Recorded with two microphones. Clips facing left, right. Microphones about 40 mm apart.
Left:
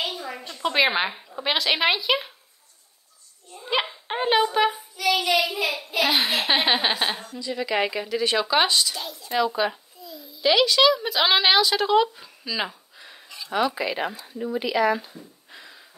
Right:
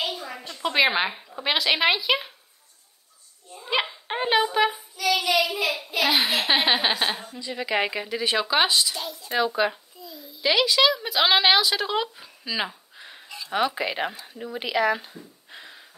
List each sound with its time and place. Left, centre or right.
0.0 s a woman's voice: centre
3.5 s dog: centre
5.8 s speech: centre
7.2 s a woman's voice: centre
13.5 s speech: right
15.5 s a sound: right